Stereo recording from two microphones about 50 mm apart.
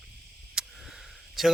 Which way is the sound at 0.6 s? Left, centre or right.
Centre.